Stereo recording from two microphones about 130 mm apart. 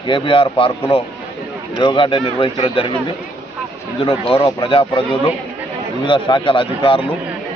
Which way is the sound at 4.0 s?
40° left (ahead or behind).